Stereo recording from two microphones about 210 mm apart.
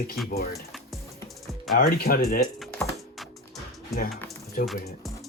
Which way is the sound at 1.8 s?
45° left (ahead or behind).